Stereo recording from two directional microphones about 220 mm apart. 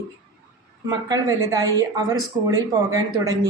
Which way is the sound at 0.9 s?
15° right (ahead or behind).